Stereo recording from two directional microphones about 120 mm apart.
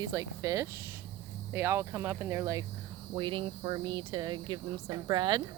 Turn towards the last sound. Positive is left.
turn(degrees=-40)  # may be behind; listen again after turning